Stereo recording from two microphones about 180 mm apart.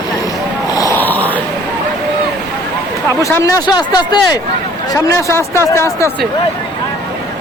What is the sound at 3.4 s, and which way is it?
Speech, 20° left (ahead or behind).